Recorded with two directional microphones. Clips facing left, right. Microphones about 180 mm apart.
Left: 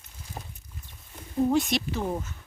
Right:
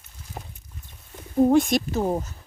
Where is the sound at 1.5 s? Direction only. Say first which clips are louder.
Right 6 dB; 50° right (ahead or behind).